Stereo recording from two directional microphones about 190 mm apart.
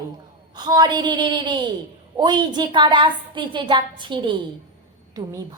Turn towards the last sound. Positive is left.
turn(degrees=-20)  # may be behind; listen again after turning